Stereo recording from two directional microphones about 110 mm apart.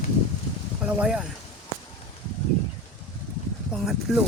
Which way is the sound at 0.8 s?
10° right (ahead or behind).